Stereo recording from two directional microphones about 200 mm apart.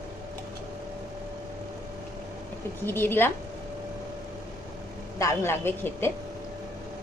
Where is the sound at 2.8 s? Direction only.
10° left (ahead or behind).